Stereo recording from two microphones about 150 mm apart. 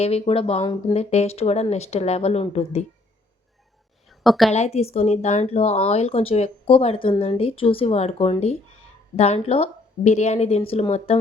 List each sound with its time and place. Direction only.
0.0 s speech: 40° left (ahead or behind)
0.6 s speech: 25° left (ahead or behind)
0.9 s speech: 45° left (ahead or behind)
4.2 s a woman's voice: centre (ahead or behind)
4.5 s speech: 45° left (ahead or behind)